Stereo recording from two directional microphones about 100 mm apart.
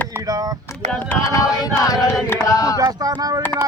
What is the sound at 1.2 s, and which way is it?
Chant, 35° left (ahead or behind).